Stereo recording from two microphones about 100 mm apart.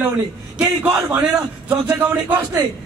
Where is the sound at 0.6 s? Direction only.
10° right (ahead or behind).